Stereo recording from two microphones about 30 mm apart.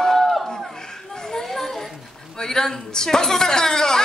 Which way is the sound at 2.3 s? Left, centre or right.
Centre.